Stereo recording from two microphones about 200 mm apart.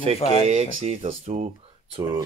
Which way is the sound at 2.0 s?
20° right (ahead or behind).